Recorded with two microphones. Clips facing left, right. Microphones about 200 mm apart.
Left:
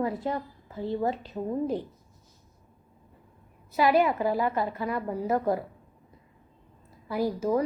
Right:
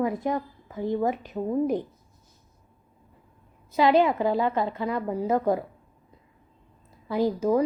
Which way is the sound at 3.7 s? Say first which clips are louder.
Right 2 dB; 20° right (ahead or behind).